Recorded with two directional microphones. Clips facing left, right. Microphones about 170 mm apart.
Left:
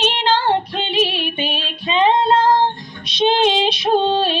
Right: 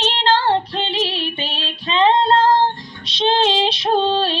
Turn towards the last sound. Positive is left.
turn(degrees=15)  # may be behind; listen again after turning